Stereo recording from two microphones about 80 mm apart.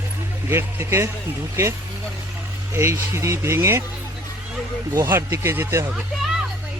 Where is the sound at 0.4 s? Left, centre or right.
Right.